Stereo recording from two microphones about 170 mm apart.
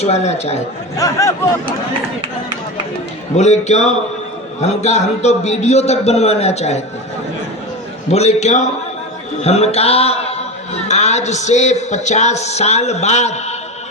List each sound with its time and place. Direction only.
0.0 s speech: 40° left (ahead or behind)
0.9 s speech: 20° left (ahead or behind)
3.3 s speech: 40° left (ahead or behind)
8.1 s a man's voice: 40° left (ahead or behind)